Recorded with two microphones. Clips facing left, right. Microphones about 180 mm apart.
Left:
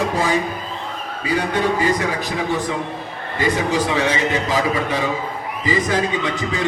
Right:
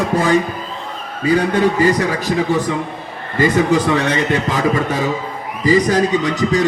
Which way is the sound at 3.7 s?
55° right (ahead or behind).